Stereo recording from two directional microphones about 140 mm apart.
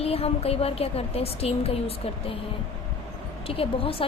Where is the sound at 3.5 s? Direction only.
40° left (ahead or behind).